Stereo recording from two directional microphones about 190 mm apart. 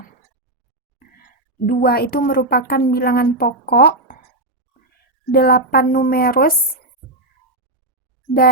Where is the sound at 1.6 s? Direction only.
50° left (ahead or behind).